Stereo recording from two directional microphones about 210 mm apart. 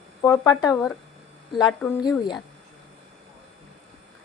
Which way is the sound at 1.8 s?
Centre (ahead or behind).